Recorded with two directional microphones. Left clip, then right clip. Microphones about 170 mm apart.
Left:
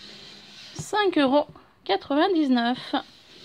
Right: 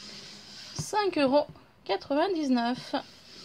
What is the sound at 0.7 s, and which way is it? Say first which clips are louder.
A woman's voice: left 5 dB; 30° left (ahead or behind).